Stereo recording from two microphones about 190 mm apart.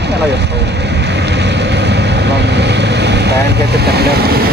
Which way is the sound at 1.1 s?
65° right (ahead or behind).